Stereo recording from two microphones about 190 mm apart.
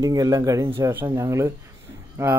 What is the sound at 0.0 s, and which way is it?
Speech, 20° right (ahead or behind).